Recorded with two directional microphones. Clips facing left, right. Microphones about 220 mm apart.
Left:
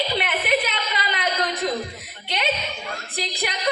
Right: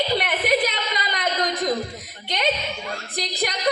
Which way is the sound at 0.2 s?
40° right (ahead or behind).